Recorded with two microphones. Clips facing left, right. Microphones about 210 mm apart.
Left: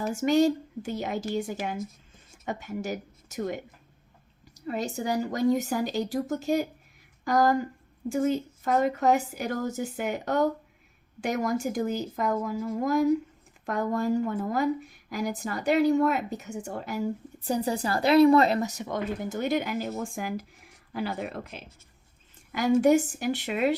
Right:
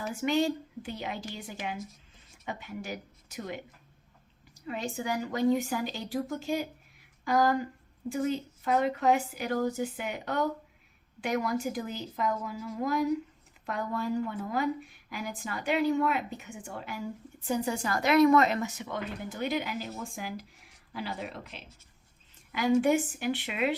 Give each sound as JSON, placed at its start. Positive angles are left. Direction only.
{"t": 0.0, "sound": "a woman's voice", "side_deg": 45}
{"t": 4.6, "sound": "a woman's voice", "side_deg": 40}